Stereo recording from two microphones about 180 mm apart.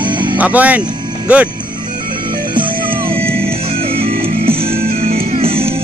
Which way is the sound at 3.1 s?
30° right (ahead or behind).